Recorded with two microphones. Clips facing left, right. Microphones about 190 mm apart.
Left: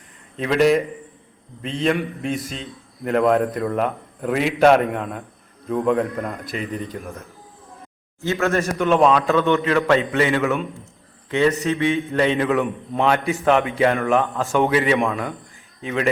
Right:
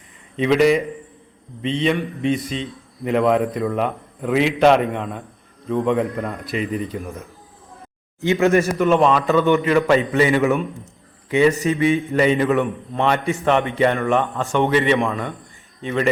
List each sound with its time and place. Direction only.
0.3 s a man's voice: centre (ahead or behind)
8.2 s speech: 15° right (ahead or behind)
8.8 s a man's voice: centre (ahead or behind)
10.2 s speech: 15° right (ahead or behind)
11.6 s a man's voice: 5° right (ahead or behind)